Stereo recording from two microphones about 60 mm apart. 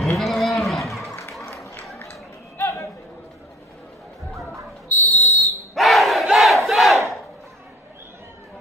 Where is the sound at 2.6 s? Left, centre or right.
Left.